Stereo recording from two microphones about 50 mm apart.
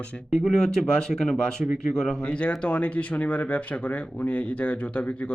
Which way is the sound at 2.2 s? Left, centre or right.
Left.